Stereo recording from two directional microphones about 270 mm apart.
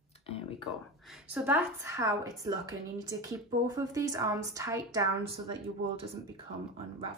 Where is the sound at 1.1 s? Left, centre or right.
Centre.